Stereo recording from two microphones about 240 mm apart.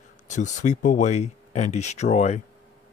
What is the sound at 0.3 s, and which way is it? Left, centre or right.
Speech, left.